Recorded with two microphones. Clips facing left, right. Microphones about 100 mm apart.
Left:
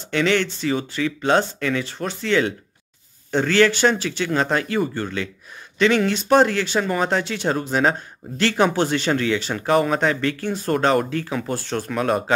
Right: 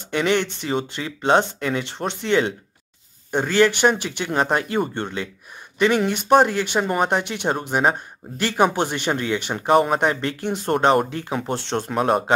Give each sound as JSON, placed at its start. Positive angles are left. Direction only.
{"t": 0.1, "sound": "speech", "side_deg": -15}